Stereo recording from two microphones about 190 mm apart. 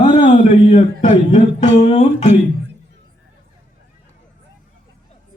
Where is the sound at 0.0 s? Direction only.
40° left (ahead or behind).